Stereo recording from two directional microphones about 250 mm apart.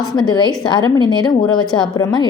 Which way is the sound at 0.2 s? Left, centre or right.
Centre.